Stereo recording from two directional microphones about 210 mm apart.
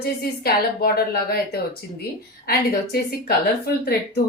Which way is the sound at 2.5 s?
50° left (ahead or behind).